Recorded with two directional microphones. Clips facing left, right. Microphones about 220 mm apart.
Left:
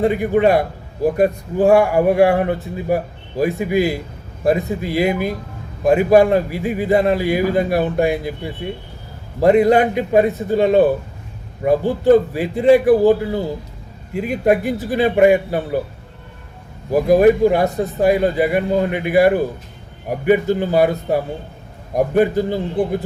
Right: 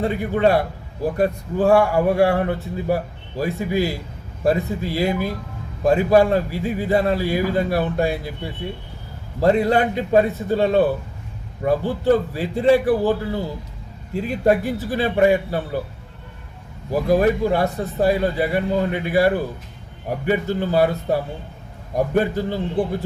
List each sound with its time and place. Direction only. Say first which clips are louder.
0.0 s speech: left 4 dB; 15° left (ahead or behind)
9.4 s speech: left 5 dB; 15° left (ahead or behind)
16.9 s speech: left 5 dB; 15° left (ahead or behind)
21.9 s speech: left 4 dB; 15° left (ahead or behind)